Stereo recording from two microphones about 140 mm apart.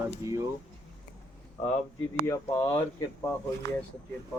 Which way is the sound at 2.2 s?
20° left (ahead or behind).